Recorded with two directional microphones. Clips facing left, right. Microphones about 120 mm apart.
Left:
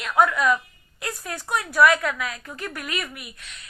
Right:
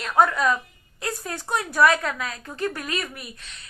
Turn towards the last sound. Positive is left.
turn(degrees=-35)  # may be behind; listen again after turning